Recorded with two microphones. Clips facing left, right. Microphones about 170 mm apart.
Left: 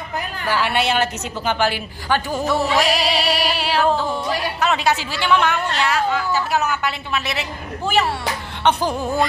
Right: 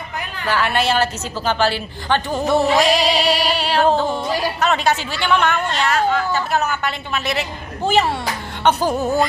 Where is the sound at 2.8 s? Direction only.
5° left (ahead or behind).